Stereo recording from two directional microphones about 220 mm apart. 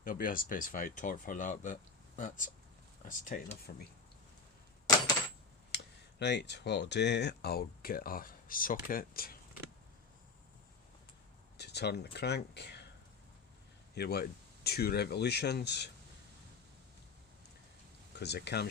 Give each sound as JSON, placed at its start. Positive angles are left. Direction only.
{"t": 0.0, "sound": "speech", "side_deg": 40}
{"t": 5.7, "sound": "speech", "side_deg": 50}
{"t": 11.5, "sound": "speech", "side_deg": 50}
{"t": 13.9, "sound": "speech", "side_deg": 45}
{"t": 18.2, "sound": "speech", "side_deg": 50}